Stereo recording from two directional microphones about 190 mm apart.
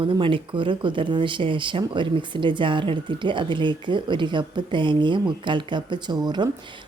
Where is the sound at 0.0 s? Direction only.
25° right (ahead or behind).